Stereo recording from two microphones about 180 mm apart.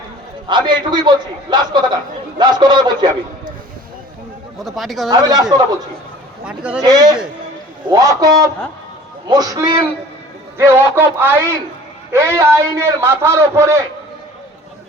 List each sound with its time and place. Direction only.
0.4 s a man's voice: 25° right (ahead or behind)
4.6 s speech: centre (ahead or behind)
5.1 s a man's voice: 20° right (ahead or behind)
6.4 s speech: 5° right (ahead or behind)
6.8 s a man's voice: 20° right (ahead or behind)